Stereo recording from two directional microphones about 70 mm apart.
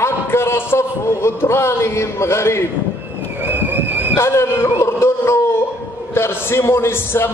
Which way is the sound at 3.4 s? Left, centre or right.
Right.